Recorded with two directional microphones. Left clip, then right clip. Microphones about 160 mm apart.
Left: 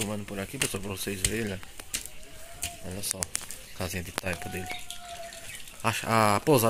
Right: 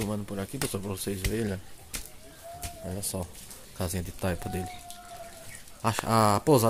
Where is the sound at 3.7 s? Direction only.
20° right (ahead or behind).